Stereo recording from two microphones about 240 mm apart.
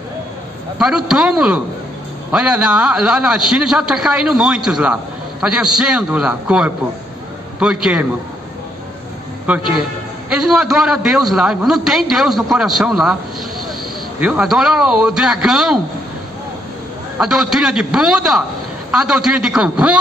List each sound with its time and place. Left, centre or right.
0.7 s a man's voice: centre
9.5 s a man's voice: centre
14.2 s a man's voice: centre
17.2 s a man's voice: centre